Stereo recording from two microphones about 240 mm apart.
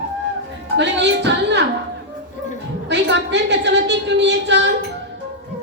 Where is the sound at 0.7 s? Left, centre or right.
Right.